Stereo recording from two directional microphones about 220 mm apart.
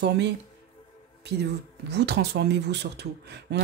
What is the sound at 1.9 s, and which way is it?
Speech, 50° right (ahead or behind).